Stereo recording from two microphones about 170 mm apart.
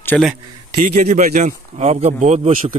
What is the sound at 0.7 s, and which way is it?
Speech, 55° right (ahead or behind).